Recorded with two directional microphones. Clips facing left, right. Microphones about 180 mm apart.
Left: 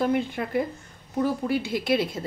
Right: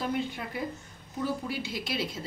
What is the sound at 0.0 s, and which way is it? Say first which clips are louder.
Speech: left 7 dB; 55° left (ahead or behind).